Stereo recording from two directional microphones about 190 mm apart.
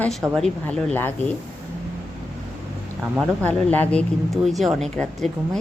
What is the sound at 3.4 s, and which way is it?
A woman's voice, 5° left (ahead or behind).